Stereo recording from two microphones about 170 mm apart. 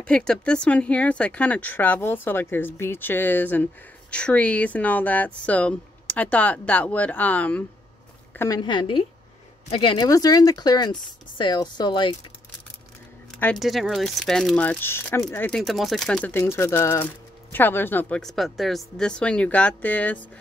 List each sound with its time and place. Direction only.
0.0 s speech: 5° left (ahead or behind)
8.3 s a sound: 15° left (ahead or behind)
8.5 s speech: 25° left (ahead or behind)
13.3 s speech: 5° left (ahead or behind)
15.5 s speech: centre (ahead or behind)